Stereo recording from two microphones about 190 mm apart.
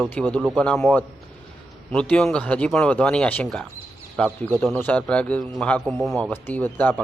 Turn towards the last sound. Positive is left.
turn(degrees=10)  # may be behind; listen again after turning